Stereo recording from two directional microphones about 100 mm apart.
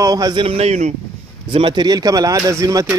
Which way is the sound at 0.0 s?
40° right (ahead or behind).